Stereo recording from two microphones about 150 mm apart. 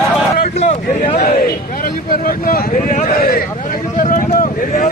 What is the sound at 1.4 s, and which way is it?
Speech, 90° left.